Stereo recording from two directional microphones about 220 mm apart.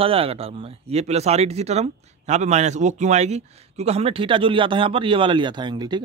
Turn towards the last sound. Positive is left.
turn(degrees=-20)  # may be behind; listen again after turning